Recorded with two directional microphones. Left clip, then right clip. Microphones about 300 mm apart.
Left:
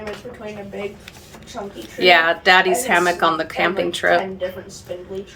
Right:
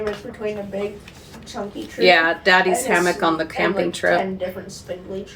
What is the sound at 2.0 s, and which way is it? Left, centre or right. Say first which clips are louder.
Speech: left 1 dB; centre.